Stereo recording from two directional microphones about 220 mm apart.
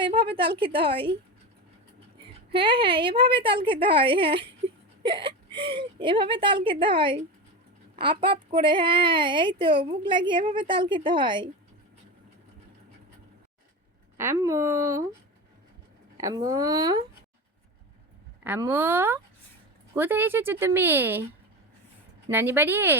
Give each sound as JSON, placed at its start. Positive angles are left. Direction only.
{"t": 0.0, "sound": "speech", "side_deg": -25}
{"t": 2.5, "sound": "speech", "side_deg": -25}
{"t": 14.2, "sound": "speech", "side_deg": -10}
{"t": 16.1, "sound": "speech", "side_deg": -15}
{"t": 18.4, "sound": "speech", "side_deg": -10}
{"t": 22.3, "sound": "speech", "side_deg": -10}